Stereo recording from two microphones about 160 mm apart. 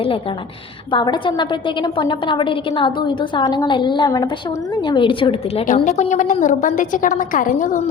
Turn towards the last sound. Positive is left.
turn(degrees=55)  # may be behind; listen again after turning